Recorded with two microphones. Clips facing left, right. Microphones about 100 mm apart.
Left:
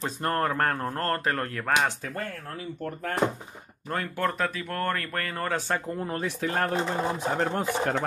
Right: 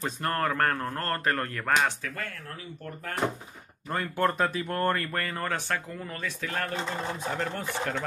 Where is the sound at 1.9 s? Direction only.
35° left (ahead or behind).